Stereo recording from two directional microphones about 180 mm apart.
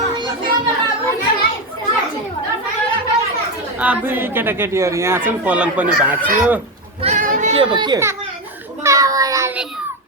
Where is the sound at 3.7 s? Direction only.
10° right (ahead or behind).